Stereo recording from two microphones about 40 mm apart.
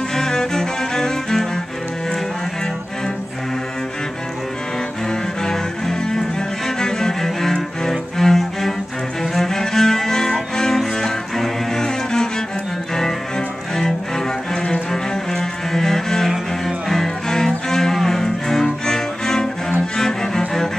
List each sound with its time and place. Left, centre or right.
0.1 s cello: centre
5.4 s cello: centre
13.7 s cello: centre
14.9 s cello: centre
16.3 s music: centre
17.0 s music: centre
17.6 s cello: centre